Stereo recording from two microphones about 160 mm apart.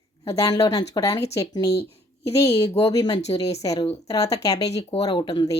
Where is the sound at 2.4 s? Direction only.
40° left (ahead or behind).